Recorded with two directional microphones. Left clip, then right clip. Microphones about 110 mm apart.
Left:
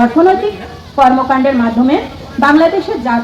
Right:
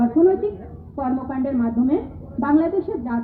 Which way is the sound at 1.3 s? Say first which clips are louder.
Left 13 dB; 20° left (ahead or behind).